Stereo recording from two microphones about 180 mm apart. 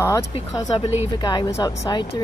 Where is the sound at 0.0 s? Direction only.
15° left (ahead or behind).